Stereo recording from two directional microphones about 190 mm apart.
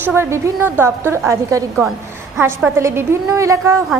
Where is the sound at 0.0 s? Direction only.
10° right (ahead or behind).